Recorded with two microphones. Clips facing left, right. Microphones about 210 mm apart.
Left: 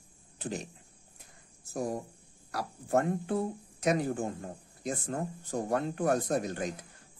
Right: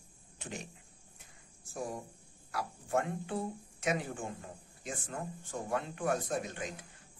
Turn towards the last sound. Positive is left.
turn(degrees=40)  # may be behind; listen again after turning